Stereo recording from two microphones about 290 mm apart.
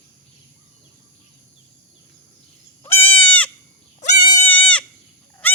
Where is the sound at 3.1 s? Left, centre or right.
Centre.